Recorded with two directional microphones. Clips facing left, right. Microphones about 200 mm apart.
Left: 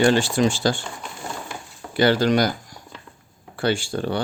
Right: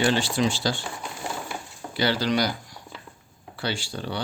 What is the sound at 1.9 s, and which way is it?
Speech, 50° left (ahead or behind).